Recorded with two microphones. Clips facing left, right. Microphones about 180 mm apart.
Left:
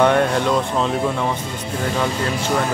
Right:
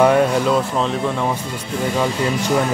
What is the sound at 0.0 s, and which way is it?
Speech, 5° right (ahead or behind).